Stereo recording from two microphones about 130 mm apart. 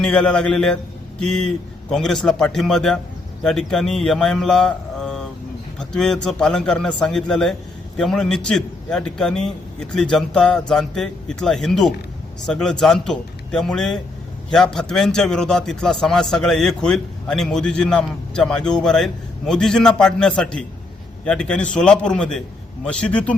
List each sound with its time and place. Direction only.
0.0 s a man's voice: 5° left (ahead or behind)